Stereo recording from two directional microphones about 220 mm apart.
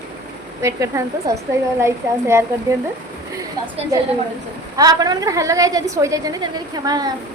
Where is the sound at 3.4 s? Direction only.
15° right (ahead or behind).